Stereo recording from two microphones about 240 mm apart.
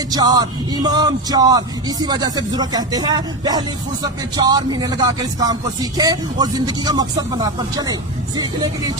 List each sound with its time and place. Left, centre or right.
0.1 s speech: centre